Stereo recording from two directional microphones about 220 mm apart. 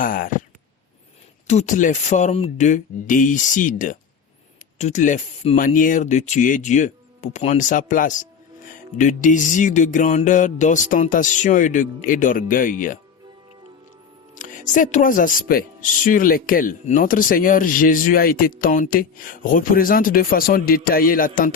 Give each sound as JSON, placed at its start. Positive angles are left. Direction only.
{"t": 0.0, "sound": "speech", "side_deg": 40}
{"t": 1.5, "sound": "speech", "side_deg": 35}
{"t": 14.3, "sound": "speech", "side_deg": 35}